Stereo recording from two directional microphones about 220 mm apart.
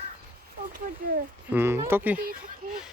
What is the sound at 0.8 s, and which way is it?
Speech, 40° right (ahead or behind).